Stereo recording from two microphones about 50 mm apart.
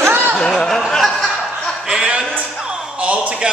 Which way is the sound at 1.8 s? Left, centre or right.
Centre.